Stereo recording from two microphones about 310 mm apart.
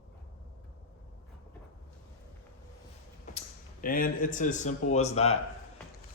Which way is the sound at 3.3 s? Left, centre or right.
Left.